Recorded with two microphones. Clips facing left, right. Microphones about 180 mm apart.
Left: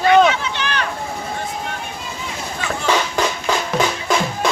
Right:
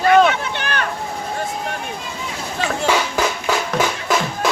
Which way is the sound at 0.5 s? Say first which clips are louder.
Even; 50° right (ahead or behind).